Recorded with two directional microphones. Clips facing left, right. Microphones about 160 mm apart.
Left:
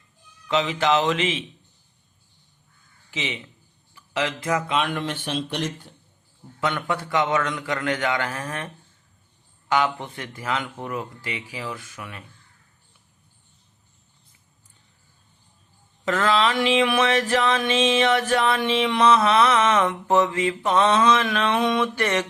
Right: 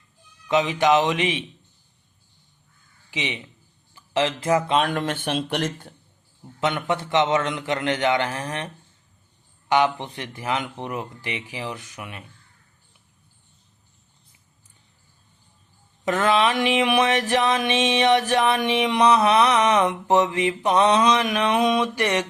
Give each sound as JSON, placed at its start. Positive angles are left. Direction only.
{"t": 0.4, "sound": "a sound", "side_deg": -20}
{"t": 3.1, "sound": "speech", "side_deg": -20}
{"t": 4.8, "sound": "speech", "side_deg": -40}
{"t": 5.2, "sound": "speech", "side_deg": -55}
{"t": 6.6, "sound": "speech", "side_deg": -20}
{"t": 16.0, "sound": "a sound", "side_deg": -20}